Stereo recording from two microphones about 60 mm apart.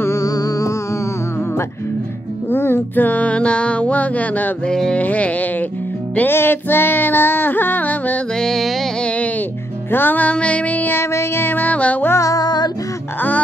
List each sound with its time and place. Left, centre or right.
0.2 s music: left
2.5 s music: left
4.6 s a sound: centre
4.9 s music: left
6.3 s music: left
8.4 s music: centre
9.8 s music: left
11.0 s music: left
12.2 s music: left